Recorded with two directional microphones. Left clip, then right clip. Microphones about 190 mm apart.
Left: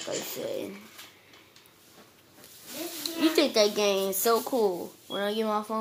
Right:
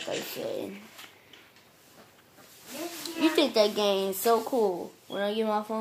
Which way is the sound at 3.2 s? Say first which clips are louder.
Even; centre (ahead or behind).